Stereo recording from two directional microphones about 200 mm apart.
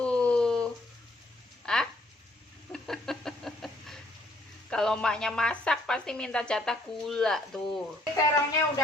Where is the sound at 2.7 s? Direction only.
Centre (ahead or behind).